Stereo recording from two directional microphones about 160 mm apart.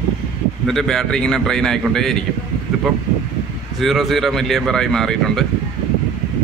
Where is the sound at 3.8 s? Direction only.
Centre (ahead or behind).